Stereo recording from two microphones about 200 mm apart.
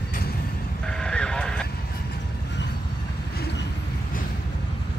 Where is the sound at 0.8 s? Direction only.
5° left (ahead or behind).